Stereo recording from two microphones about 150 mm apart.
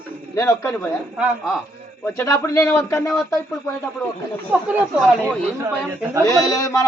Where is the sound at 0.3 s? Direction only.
20° left (ahead or behind).